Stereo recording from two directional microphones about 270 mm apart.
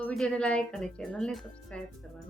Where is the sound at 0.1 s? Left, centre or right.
Centre.